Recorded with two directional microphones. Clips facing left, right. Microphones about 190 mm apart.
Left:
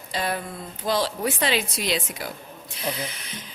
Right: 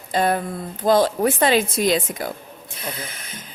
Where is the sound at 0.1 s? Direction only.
50° right (ahead or behind).